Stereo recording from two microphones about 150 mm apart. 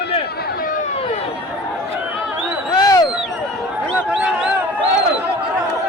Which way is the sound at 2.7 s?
25° left (ahead or behind).